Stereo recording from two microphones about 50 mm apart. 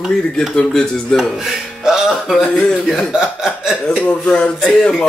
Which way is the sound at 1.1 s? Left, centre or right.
Centre.